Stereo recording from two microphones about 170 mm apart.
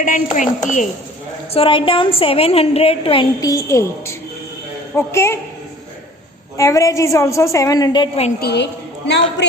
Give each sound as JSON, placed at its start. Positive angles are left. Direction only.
{"t": 0.0, "sound": "a woman's voice", "side_deg": 50}
{"t": 1.5, "sound": "a woman's voice", "side_deg": 30}
{"t": 3.4, "sound": "a woman's voice", "side_deg": 20}
{"t": 6.6, "sound": "a woman's voice", "side_deg": 20}
{"t": 8.4, "sound": "a woman's voice", "side_deg": 75}